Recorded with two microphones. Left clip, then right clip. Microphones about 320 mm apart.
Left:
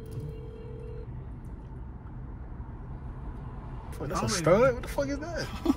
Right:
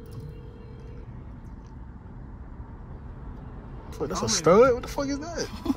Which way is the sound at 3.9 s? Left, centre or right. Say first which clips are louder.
Right 3 dB; centre.